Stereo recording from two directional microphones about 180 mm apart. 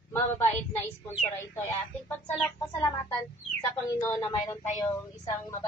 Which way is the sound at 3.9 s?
10° left (ahead or behind).